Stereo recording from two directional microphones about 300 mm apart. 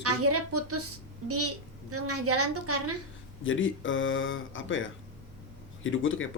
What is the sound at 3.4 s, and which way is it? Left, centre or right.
Speech, left.